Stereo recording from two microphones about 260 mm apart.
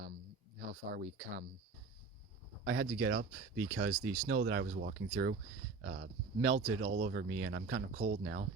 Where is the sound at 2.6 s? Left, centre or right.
Right.